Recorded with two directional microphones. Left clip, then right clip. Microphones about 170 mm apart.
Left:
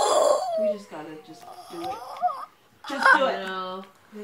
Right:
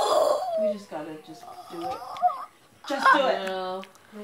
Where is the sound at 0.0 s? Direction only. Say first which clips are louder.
Left 2 dB; 20° left (ahead or behind).